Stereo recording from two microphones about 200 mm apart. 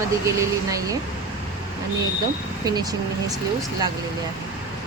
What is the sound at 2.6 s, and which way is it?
Speech, 20° right (ahead or behind).